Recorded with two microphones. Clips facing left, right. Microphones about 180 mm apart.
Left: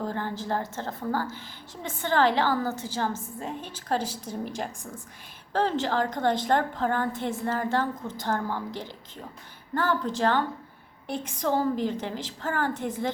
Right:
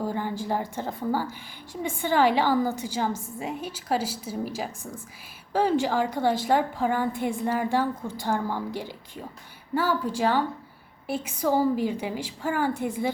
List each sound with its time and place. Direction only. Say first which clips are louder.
0.0 s a woman's voice: right 2 dB; 10° right (ahead or behind)